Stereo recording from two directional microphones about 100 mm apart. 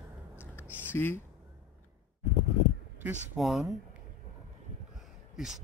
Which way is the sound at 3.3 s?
Centre (ahead or behind).